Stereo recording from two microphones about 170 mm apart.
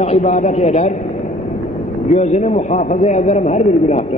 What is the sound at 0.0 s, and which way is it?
Speech, 40° left (ahead or behind).